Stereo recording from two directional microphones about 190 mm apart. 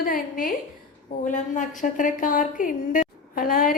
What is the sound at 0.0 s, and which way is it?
A woman's voice, 45° left (ahead or behind).